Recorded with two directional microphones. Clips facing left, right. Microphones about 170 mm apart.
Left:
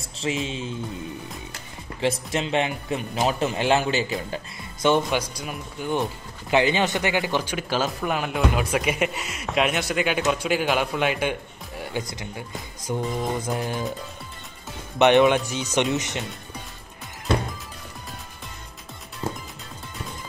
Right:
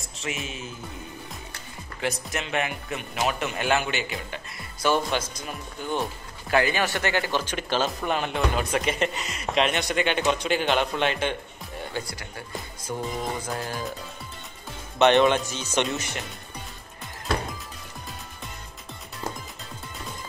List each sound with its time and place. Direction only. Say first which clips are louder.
0.2 s speech: left 6 dB; 30° left (ahead or behind)
2.0 s speech: left 5 dB; 30° left (ahead or behind)
15.0 s speech: left 2 dB; 15° left (ahead or behind)
19.2 s music: left 3 dB; 5° left (ahead or behind)